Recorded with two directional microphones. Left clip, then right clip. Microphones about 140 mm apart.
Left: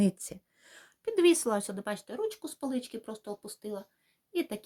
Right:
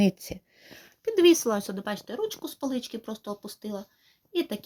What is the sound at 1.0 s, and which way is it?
Speech, 25° right (ahead or behind).